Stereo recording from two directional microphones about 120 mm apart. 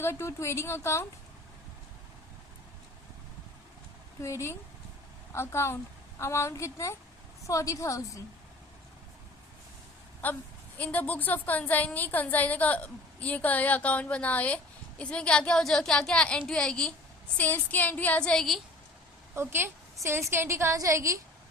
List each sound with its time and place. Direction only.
0.0 s a woman's voice: 20° left (ahead or behind)
4.2 s a woman's voice: 25° left (ahead or behind)
10.2 s a woman's voice: 15° left (ahead or behind)
19.3 s a woman's voice: 20° right (ahead or behind)